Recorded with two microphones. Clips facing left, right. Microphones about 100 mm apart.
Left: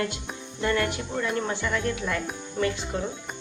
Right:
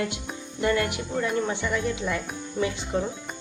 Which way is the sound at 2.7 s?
20° right (ahead or behind).